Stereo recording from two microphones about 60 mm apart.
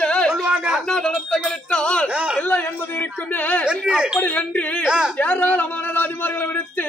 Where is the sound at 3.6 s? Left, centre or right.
Centre.